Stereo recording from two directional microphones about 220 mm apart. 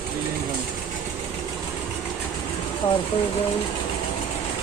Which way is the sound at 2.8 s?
25° left (ahead or behind).